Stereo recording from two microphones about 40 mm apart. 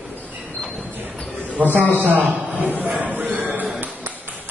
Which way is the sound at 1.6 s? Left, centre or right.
Right.